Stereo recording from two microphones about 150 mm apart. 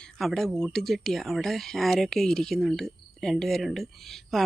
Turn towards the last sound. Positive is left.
turn(degrees=0)  # may be behind; listen again after turning